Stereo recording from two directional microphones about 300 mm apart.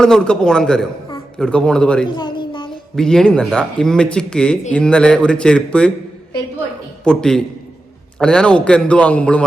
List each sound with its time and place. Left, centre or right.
0.0 s speech: centre
2.1 s a sound: centre
2.9 s speech: centre
7.0 s speech: centre